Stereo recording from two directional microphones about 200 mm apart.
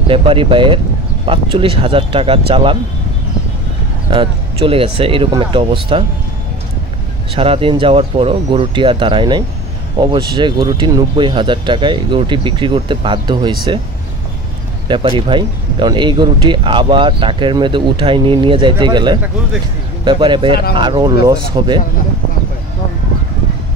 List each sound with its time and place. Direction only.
0.1 s speech: 25° right (ahead or behind)
4.1 s speech: 25° right (ahead or behind)
7.3 s speech: 30° right (ahead or behind)
14.9 s speech: 25° right (ahead or behind)